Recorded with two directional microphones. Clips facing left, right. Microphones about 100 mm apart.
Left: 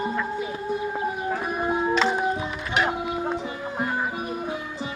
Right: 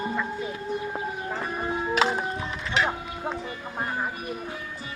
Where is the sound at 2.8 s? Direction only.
10° left (ahead or behind).